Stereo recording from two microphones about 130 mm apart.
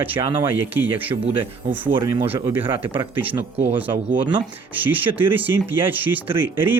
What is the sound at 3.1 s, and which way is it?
Speech, 15° right (ahead or behind).